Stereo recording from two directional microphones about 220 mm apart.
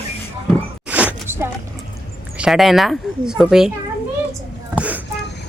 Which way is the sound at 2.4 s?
Centre (ahead or behind).